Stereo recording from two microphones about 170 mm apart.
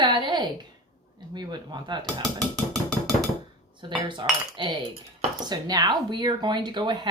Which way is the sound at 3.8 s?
25° right (ahead or behind).